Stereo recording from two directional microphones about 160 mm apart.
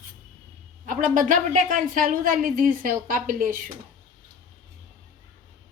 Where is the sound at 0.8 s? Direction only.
55° right (ahead or behind).